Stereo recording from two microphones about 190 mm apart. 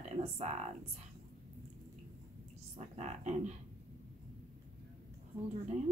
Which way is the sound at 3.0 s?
35° right (ahead or behind).